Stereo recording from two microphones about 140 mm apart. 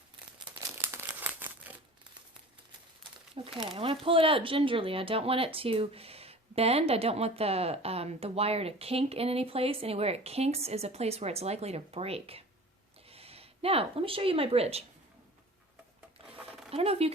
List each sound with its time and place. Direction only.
0.8 s crumpling: 15° right (ahead or behind)
3.4 s speech: 40° right (ahead or behind)
16.5 s zipper: centre (ahead or behind)
16.7 s speech: 45° right (ahead or behind)